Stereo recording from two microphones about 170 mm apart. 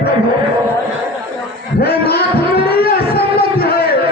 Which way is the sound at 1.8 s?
65° left (ahead or behind).